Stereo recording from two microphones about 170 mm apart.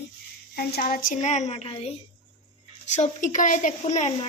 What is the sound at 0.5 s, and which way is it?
Speech, 60° left (ahead or behind).